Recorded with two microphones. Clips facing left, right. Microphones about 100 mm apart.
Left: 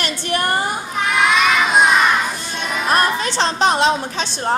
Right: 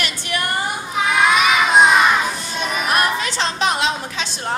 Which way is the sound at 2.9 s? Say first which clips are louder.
Left 3 dB; 35° left (ahead or behind).